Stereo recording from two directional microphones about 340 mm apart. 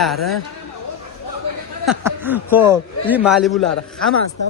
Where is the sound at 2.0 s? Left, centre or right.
Centre.